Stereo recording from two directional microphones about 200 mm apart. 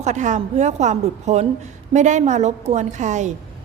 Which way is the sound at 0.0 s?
35° right (ahead or behind).